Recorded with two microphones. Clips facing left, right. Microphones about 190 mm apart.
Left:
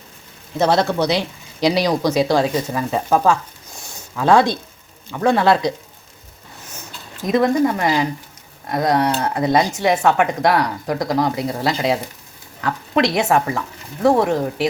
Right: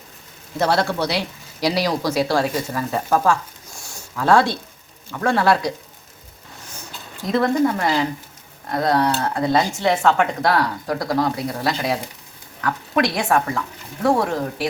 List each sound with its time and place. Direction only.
0.6 s speech: 20° left (ahead or behind)
3.8 s a sound: 20° left (ahead or behind)
5.1 s speech: 20° left (ahead or behind)
7.2 s speech: 15° left (ahead or behind)